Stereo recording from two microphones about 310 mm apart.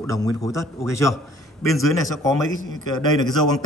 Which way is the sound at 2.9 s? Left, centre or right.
Centre.